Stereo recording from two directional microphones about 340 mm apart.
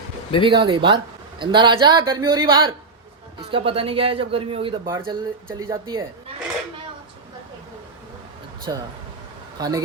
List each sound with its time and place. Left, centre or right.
0.4 s a man's voice: centre
8.7 s a man's voice: centre